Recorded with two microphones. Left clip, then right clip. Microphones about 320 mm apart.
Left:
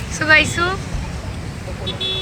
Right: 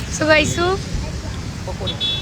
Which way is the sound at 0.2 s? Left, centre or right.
Centre.